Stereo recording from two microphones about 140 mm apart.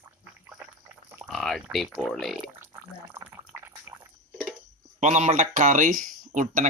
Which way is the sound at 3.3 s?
20° right (ahead or behind).